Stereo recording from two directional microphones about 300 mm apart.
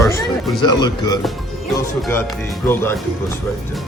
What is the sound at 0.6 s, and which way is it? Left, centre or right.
Speech, centre.